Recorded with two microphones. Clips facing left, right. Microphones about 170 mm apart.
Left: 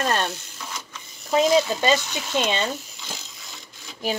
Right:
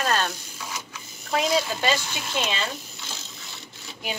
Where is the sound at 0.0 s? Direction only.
15° left (ahead or behind).